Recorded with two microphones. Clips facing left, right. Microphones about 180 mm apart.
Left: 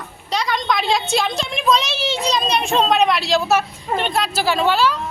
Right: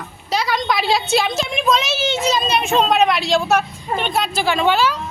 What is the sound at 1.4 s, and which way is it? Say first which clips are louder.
A woman's voice: even; centre (ahead or behind).